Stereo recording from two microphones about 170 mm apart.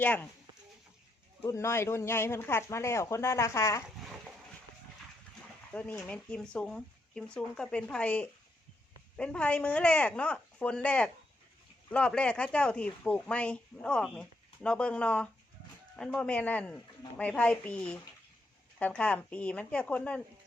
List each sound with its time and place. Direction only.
0.0 s speech: 10° left (ahead or behind)
1.4 s speech: 15° left (ahead or behind)
5.7 s speech: 10° left (ahead or behind)